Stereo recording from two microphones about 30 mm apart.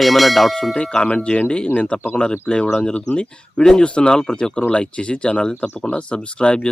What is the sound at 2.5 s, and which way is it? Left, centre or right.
Speech, left.